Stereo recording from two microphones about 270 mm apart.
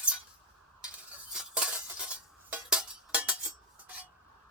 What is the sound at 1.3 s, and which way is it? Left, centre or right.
Chink, centre.